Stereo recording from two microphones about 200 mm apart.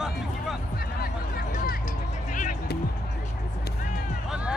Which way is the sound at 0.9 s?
45° left (ahead or behind).